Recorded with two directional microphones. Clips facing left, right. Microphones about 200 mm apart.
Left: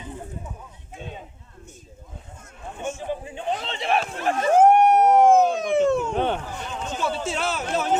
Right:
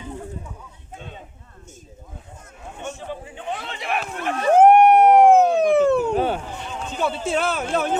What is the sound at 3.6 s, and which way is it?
Run, 25° left (ahead or behind).